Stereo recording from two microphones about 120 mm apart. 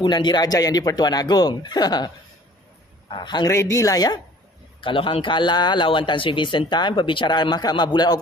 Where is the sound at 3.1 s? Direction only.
40° left (ahead or behind).